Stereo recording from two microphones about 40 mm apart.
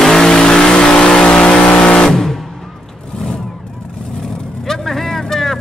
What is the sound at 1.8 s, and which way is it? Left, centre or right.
Music, left.